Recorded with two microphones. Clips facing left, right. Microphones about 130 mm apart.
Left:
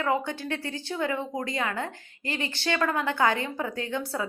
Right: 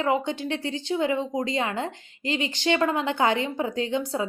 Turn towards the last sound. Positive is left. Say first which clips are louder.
# right 4 dB
turn(degrees=-20)  # may be behind; listen again after turning